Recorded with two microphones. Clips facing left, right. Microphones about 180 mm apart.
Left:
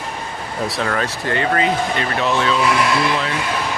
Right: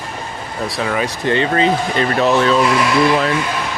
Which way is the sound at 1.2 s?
25° right (ahead or behind).